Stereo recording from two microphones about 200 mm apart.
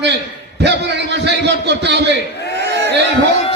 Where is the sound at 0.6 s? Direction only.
60° right (ahead or behind).